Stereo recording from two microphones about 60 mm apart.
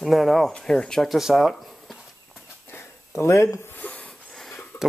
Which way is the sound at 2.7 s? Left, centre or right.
Left.